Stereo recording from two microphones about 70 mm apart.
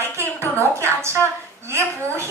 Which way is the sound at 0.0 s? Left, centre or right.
Right.